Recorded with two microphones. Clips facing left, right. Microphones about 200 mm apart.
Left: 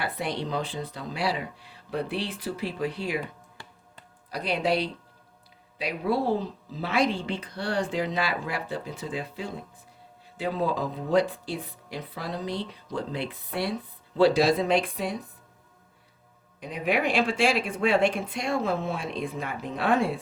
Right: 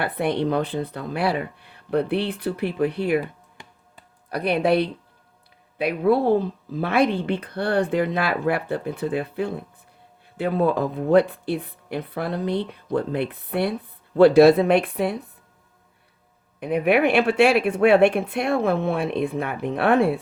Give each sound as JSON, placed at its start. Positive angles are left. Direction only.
{"t": 0.0, "sound": "speech", "side_deg": -60}
{"t": 3.6, "sound": "music", "side_deg": -20}
{"t": 4.3, "sound": "speech", "side_deg": -60}
{"t": 16.6, "sound": "speech", "side_deg": -60}